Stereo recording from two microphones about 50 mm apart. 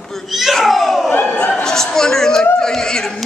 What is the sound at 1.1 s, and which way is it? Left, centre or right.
Speech, left.